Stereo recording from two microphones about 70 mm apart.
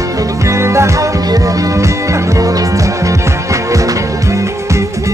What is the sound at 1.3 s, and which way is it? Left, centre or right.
Music, right.